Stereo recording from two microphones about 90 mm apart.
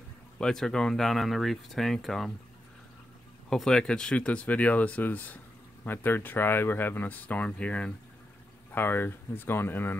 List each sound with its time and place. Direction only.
0.4 s speech: 5° left (ahead or behind)
3.4 s speech: 5° left (ahead or behind)
8.7 s speech: 25° left (ahead or behind)